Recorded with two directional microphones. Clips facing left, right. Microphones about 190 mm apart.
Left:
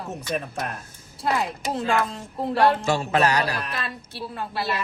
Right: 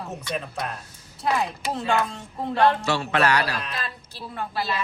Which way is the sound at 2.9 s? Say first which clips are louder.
Left 1 dB; 40° left (ahead or behind).